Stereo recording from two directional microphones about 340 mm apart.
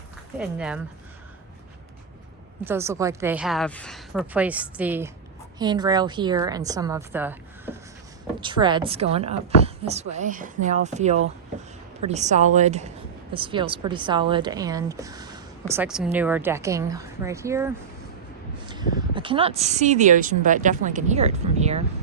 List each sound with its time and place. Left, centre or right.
0.3 s a woman's voice: centre
2.6 s a woman's voice: centre